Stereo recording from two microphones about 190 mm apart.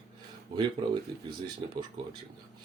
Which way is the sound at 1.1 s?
25° right (ahead or behind).